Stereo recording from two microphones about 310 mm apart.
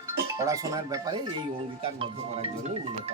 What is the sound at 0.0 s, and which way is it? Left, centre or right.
Speech, centre.